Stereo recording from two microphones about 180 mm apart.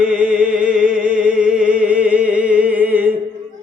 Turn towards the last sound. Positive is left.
turn(degrees=-10)  # may be behind; listen again after turning